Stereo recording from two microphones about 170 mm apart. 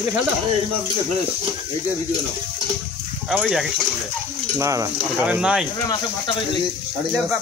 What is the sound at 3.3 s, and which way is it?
Speech, 5° right (ahead or behind).